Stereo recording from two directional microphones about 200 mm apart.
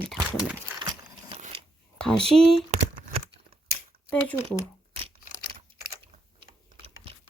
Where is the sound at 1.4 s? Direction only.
35° right (ahead or behind).